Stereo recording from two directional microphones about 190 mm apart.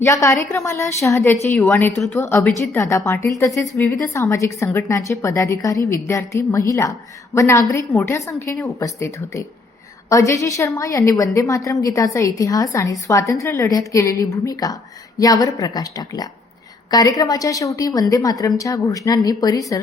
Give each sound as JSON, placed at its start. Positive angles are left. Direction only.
{"t": 0.0, "sound": "a woman's voice", "side_deg": 15}